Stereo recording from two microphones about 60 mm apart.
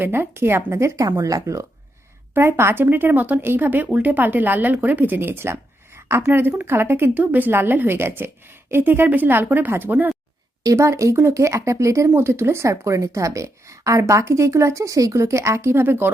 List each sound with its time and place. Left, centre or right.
0.0 s speech: right
1.1 s a woman's voice: right
2.3 s speech: right
10.8 s a woman's voice: right
12.1 s speech: right
12.6 s a woman's voice: right